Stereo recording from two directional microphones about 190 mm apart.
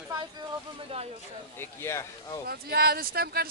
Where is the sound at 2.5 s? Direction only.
55° right (ahead or behind).